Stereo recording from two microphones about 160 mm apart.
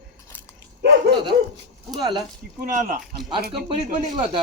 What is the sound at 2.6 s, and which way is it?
Speech, 55° right (ahead or behind).